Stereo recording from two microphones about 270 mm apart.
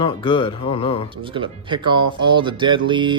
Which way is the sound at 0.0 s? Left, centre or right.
Centre.